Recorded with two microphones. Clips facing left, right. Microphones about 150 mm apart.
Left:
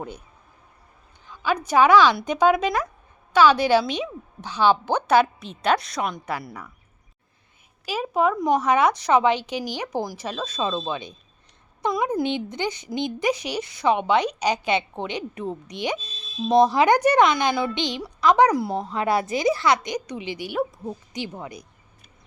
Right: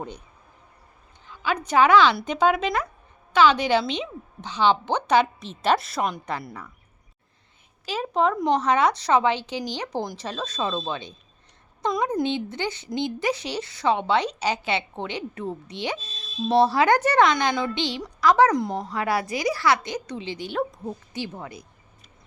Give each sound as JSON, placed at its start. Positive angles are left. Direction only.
{"t": 1.6, "sound": "a woman's voice", "side_deg": 10}
{"t": 7.9, "sound": "a woman's voice", "side_deg": 10}
{"t": 12.2, "sound": "a woman's voice", "side_deg": 15}
{"t": 18.7, "sound": "speech", "side_deg": -15}
{"t": 18.9, "sound": "a woman's voice", "side_deg": 20}